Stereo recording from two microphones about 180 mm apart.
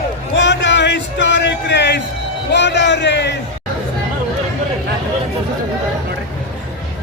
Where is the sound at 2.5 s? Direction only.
75° left (ahead or behind).